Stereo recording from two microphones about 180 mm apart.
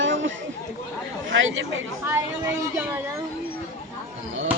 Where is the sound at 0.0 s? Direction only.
90° right.